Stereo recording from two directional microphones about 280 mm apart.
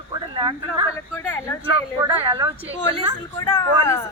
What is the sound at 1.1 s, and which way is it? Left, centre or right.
Speech, centre.